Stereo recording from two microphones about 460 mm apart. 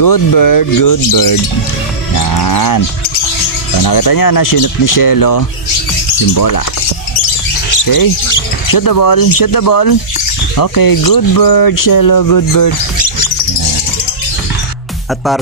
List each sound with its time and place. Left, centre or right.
0.0 s speech: left
3.8 s speech: left
7.7 s speech: left